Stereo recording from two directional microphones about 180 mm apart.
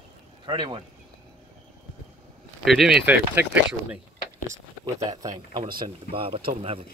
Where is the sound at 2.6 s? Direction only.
Centre (ahead or behind).